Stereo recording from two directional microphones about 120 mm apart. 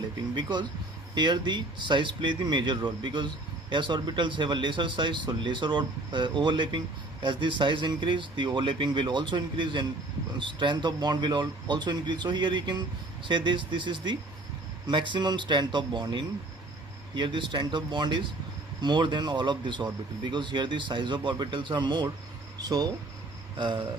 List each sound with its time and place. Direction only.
0.3 s speech: 35° right (ahead or behind)
23.6 s speech: 40° right (ahead or behind)